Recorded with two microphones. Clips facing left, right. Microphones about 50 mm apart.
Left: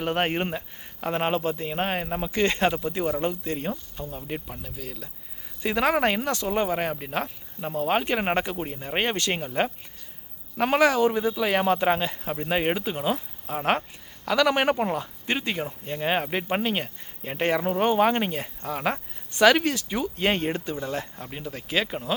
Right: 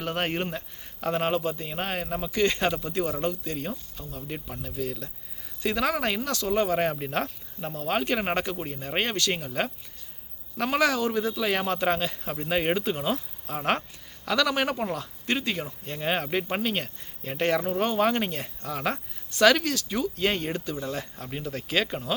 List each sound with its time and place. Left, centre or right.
0.0 s speech: centre
2.3 s speech: left
2.6 s speech: centre
4.2 s speech: centre
5.6 s speech: left
6.5 s speech: centre
6.7 s speech: centre
7.7 s speech: centre
9.1 s speech: left
9.5 s speech: centre
14.4 s speech: left; by 22.1 s centre